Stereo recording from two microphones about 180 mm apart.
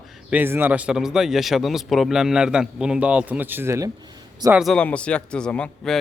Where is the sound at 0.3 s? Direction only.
10° right (ahead or behind).